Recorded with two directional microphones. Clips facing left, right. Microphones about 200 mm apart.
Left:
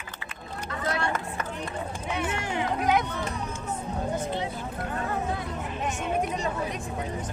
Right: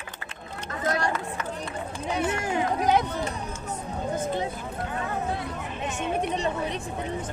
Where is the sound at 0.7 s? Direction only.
35° right (ahead or behind).